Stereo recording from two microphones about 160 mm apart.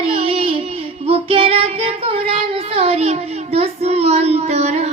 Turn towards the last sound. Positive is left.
turn(degrees=-40)  # may be behind; listen again after turning